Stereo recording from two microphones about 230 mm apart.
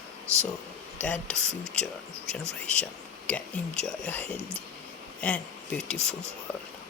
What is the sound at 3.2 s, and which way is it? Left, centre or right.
Speech, centre.